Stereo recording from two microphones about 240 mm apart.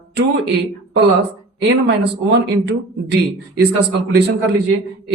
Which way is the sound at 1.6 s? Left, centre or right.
Right.